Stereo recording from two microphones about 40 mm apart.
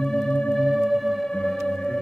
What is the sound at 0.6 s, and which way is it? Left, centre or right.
Music, centre.